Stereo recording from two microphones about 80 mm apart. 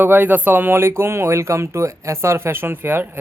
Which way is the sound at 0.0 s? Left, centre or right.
Right.